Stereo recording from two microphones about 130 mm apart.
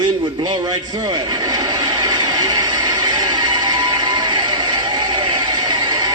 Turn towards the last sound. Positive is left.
turn(degrees=-35)  # may be behind; listen again after turning